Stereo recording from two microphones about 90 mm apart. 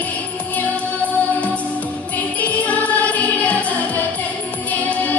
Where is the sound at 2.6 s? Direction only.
15° left (ahead or behind).